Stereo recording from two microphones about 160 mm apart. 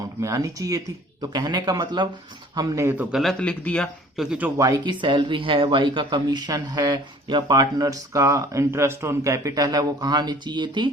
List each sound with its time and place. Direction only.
0.2 s speech: 20° right (ahead or behind)
3.1 s speech: centre (ahead or behind)
4.2 s speech: 5° right (ahead or behind); by 10.9 s 30° right (ahead or behind)